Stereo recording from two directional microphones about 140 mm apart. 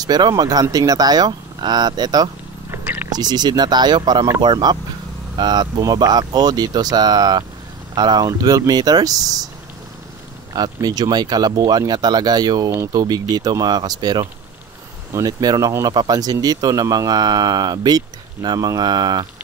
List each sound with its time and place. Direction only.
0.0 s speech: 30° right (ahead or behind)
2.7 s a sound: 15° right (ahead or behind)
3.1 s speech: 30° right (ahead or behind)
10.5 s speech: 30° right (ahead or behind)